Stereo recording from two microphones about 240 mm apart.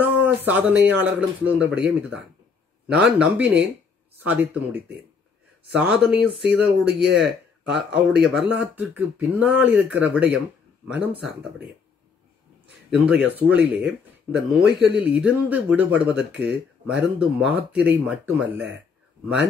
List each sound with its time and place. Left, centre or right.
0.0 s speech: centre
12.6 s speech: centre